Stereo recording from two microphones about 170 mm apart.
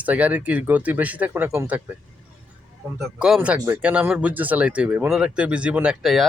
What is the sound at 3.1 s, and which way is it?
Speech, 5° right (ahead or behind).